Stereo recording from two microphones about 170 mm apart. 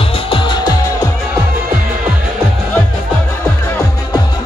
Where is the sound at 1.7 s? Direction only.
10° right (ahead or behind).